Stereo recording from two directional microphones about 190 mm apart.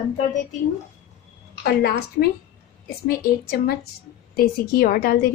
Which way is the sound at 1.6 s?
55° left (ahead or behind).